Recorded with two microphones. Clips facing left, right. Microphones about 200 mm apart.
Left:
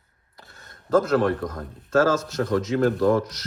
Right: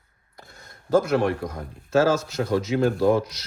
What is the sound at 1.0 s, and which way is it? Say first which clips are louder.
Speech: left 1 dB; 10° right (ahead or behind).